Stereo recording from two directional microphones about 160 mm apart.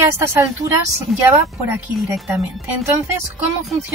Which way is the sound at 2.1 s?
5° right (ahead or behind).